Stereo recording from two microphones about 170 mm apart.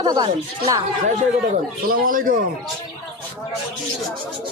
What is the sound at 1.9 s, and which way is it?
Speech, 55° right (ahead or behind).